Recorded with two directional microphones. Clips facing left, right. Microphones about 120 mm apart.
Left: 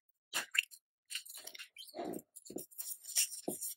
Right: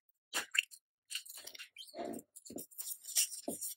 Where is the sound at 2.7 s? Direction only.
20° right (ahead or behind).